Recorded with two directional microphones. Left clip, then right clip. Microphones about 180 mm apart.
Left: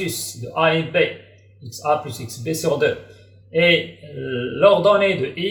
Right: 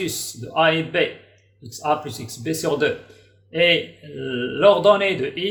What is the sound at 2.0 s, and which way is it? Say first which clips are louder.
Speech: even; 65° right (ahead or behind).